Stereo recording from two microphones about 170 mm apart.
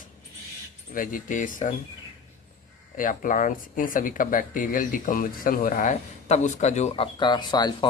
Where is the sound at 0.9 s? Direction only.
50° left (ahead or behind).